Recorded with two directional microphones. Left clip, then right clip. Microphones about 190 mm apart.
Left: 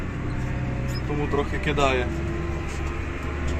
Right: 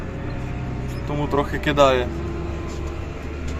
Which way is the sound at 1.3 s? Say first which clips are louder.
Right 5 dB; 25° right (ahead or behind).